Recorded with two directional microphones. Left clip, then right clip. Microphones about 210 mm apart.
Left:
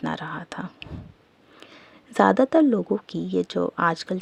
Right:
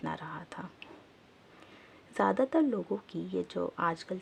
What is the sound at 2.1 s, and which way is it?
Speech, 35° left (ahead or behind).